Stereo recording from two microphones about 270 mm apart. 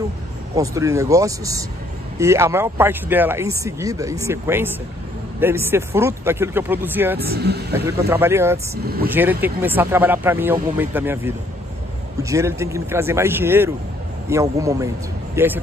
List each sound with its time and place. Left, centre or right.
0.6 s speech: centre
7.2 s speech: right
8.1 s speech: centre
8.8 s speech: right
9.1 s speech: centre